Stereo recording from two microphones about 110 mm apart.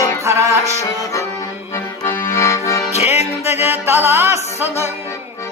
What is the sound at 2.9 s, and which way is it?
Music, 80° left.